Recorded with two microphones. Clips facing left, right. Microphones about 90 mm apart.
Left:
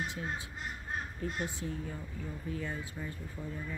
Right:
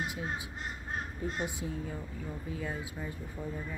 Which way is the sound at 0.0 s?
10° right (ahead or behind).